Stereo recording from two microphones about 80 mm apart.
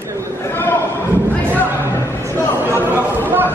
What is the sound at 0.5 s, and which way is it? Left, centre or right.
Speech, left.